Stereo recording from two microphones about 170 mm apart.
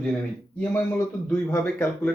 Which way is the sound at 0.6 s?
15° left (ahead or behind).